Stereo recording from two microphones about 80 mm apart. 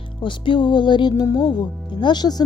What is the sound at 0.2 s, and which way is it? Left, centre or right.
Music, left.